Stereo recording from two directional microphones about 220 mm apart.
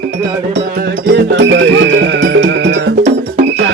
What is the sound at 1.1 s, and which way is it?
Music, 55° right (ahead or behind).